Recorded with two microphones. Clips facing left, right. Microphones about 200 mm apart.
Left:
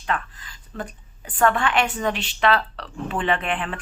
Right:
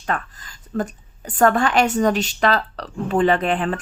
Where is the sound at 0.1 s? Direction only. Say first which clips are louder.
Right 2 dB; 45° right (ahead or behind).